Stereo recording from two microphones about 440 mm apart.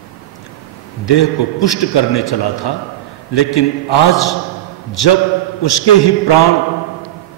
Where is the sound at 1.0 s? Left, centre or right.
Left.